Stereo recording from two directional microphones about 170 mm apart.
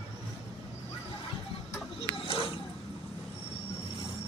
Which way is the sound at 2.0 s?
30° left (ahead or behind).